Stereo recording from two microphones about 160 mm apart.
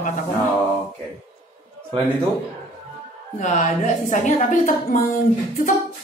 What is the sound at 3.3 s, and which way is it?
A woman's voice, 45° left (ahead or behind).